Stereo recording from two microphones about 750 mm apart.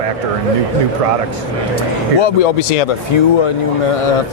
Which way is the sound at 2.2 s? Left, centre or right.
Left.